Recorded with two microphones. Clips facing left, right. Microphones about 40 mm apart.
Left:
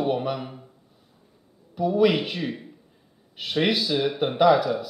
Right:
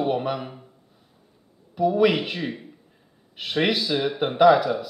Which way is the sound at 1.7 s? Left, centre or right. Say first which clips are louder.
Right 1 dB; centre.